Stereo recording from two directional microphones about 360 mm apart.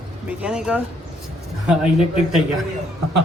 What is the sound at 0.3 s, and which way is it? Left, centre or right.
A woman's voice, centre.